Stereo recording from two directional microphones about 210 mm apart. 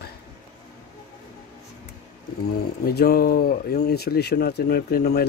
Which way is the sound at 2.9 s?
45° left (ahead or behind).